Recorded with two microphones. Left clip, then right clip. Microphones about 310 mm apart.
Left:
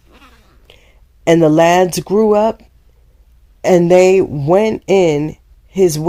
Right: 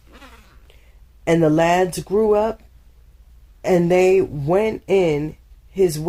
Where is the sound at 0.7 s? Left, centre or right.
Left.